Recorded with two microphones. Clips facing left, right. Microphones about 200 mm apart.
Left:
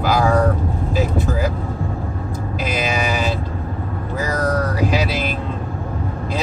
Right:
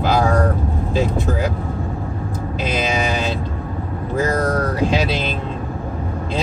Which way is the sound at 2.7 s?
25° right (ahead or behind).